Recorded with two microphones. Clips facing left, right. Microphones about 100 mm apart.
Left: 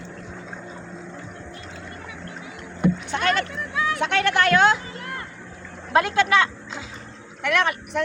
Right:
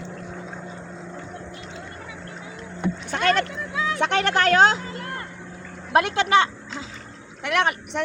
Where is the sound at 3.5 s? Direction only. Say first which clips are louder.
Left 1 dB; 25° right (ahead or behind).